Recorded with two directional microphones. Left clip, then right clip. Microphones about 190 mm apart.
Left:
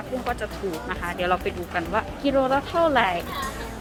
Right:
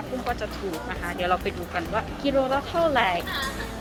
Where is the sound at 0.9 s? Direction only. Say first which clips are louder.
Left 1 dB; 15° left (ahead or behind).